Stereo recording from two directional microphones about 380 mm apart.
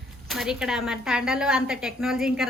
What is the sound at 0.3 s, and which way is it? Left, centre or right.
A woman's voice, centre.